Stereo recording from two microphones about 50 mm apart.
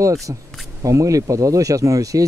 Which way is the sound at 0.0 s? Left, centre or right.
Right.